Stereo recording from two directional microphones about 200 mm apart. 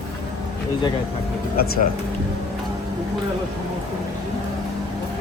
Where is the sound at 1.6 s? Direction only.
45° left (ahead or behind).